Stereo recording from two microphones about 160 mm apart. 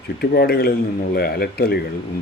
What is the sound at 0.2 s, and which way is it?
Speech, 80° left.